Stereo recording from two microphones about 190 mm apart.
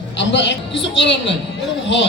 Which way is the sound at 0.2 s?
70° left (ahead or behind).